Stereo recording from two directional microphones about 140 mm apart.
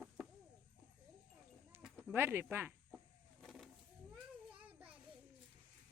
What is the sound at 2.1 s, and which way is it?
Speech, 15° right (ahead or behind).